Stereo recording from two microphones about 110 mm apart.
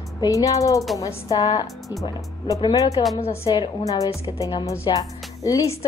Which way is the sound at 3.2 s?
65° left (ahead or behind).